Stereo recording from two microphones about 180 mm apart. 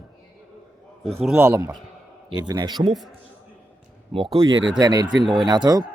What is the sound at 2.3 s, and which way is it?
Speech, 25° right (ahead or behind).